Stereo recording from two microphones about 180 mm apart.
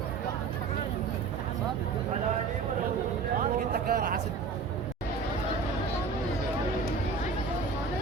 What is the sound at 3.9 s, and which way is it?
Speech, 50° right (ahead or behind).